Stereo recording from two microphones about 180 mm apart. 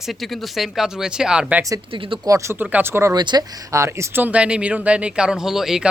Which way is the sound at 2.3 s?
15° right (ahead or behind).